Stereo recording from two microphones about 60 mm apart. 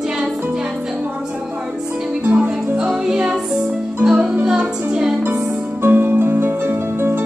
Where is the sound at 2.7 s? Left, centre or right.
Centre.